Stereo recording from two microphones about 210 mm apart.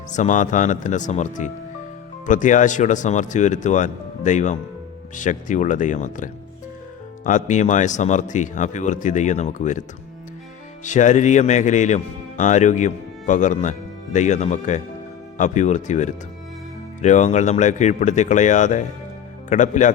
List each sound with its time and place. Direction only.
0.1 s a man's voice: 35° left (ahead or behind)
10.8 s a man's voice: 35° left (ahead or behind)